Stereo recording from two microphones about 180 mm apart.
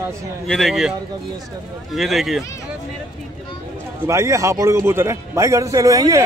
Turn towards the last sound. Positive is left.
turn(degrees=-20)  # may be behind; listen again after turning